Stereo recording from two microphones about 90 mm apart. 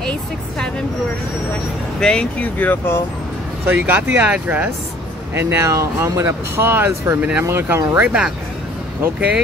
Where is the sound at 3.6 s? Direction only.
20° right (ahead or behind).